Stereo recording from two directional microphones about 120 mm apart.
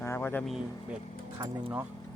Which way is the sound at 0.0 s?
20° left (ahead or behind).